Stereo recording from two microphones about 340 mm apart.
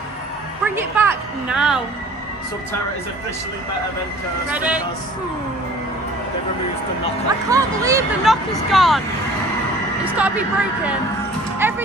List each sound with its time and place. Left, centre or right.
0.7 s speech: centre
4.5 s speech: centre
7.2 s speech: centre
10.1 s speech: centre